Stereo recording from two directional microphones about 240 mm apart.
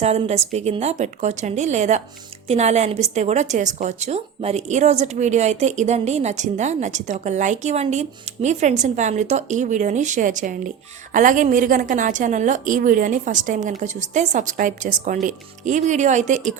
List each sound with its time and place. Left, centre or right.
0.0 s a woman's voice: right